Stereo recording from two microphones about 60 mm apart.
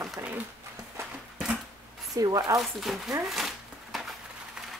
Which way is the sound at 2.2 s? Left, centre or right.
Right.